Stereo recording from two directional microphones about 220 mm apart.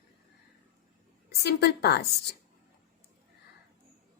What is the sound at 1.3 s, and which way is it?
Speech, 45° left (ahead or behind).